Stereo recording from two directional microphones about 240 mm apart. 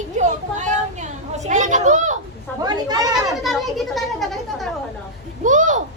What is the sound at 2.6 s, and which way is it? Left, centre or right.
Speech, centre.